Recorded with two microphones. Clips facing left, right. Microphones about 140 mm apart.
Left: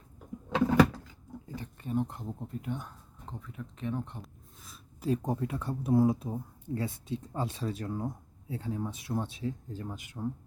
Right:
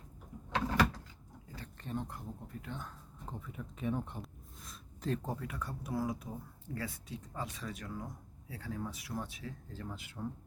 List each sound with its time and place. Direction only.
1.8 s speech: 10° left (ahead or behind)
2.0 s speech: 25° left (ahead or behind)
3.2 s speech: 5° right (ahead or behind); by 10.2 s 15° left (ahead or behind)